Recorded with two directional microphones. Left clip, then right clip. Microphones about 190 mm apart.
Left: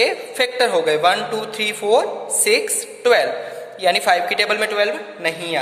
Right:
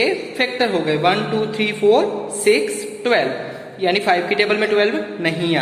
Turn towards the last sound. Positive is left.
turn(degrees=25)  # may be behind; listen again after turning